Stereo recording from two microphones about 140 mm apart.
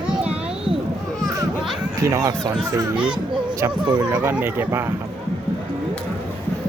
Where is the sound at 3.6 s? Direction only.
30° right (ahead or behind).